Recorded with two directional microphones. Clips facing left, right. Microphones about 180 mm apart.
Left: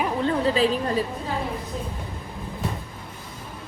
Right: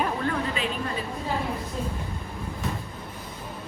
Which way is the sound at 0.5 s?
35° left (ahead or behind).